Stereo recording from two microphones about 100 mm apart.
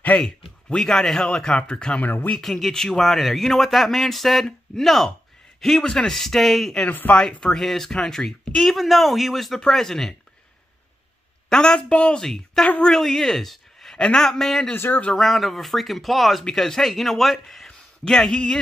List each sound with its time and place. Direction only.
0.2 s speech: 5° left (ahead or behind)
2.4 s speech: 5° left (ahead or behind)
6.9 s speech: 15° left (ahead or behind)
11.4 s a man's voice: 10° left (ahead or behind)
14.7 s speech: 15° left (ahead or behind)
15.1 s speech: centre (ahead or behind)